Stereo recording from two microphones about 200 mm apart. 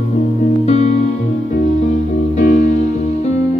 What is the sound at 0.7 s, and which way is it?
Music, 35° left (ahead or behind).